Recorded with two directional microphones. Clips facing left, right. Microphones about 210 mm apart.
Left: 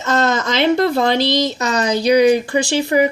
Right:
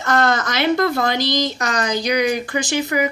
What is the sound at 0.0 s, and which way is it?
Speech, 20° left (ahead or behind).